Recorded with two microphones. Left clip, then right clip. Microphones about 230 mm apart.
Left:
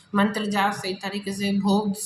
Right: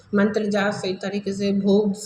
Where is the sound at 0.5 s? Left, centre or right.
Left.